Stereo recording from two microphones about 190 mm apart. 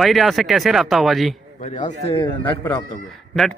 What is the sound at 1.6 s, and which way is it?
Speech, 35° left (ahead or behind).